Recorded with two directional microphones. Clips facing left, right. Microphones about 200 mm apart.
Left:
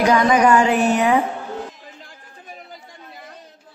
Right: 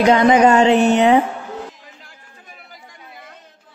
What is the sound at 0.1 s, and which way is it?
Music, 25° right (ahead or behind).